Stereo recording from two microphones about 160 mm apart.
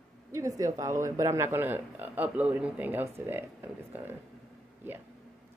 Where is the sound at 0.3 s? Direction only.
20° right (ahead or behind).